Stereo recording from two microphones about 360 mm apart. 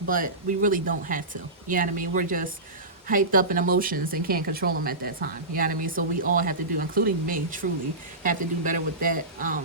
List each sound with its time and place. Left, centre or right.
0.1 s speech: right